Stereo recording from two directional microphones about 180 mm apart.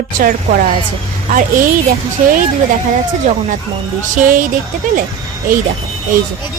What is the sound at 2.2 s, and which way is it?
Speech, 45° right (ahead or behind).